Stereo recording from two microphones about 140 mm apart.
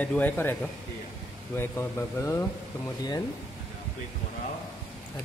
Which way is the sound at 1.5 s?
15° left (ahead or behind).